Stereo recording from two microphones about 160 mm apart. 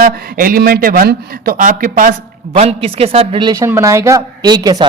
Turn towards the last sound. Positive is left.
turn(degrees=-25)  # may be behind; listen again after turning